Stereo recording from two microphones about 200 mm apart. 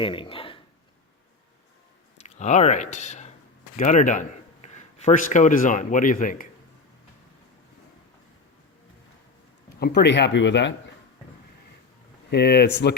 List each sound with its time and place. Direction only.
0.0 s speech: 25° left (ahead or behind)
2.1 s speech: 35° left (ahead or behind)
9.8 s speech: 55° left (ahead or behind)
12.3 s speech: 55° left (ahead or behind)